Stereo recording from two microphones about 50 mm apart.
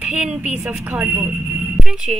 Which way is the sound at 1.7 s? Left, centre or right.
Centre.